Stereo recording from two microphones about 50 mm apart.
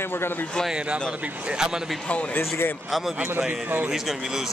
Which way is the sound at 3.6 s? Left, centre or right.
Right.